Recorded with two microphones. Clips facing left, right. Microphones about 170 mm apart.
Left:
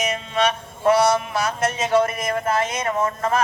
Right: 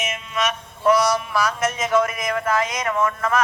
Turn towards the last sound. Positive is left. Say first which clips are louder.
# even
turn(degrees=30)  # may be behind; listen again after turning